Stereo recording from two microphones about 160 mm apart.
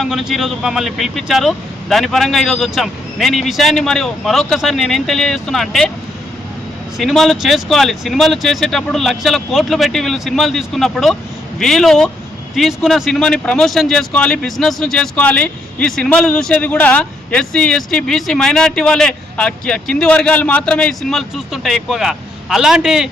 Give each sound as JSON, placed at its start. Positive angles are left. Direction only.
{"t": 0.0, "sound": "speech", "side_deg": 0}
{"t": 7.0, "sound": "speech", "side_deg": 0}